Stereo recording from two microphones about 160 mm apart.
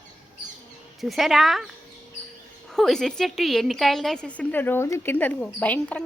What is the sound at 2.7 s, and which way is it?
A woman's voice, 5° left (ahead or behind).